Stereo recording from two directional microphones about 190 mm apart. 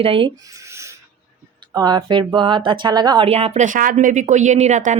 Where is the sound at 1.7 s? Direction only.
20° right (ahead or behind).